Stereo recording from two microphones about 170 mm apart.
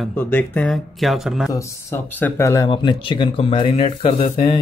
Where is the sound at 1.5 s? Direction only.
15° left (ahead or behind).